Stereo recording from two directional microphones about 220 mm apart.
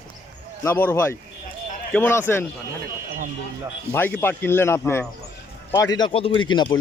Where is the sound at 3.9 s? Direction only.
10° left (ahead or behind).